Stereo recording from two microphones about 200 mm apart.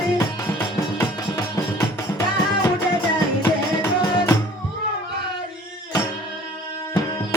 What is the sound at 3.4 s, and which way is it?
Music, 15° left (ahead or behind).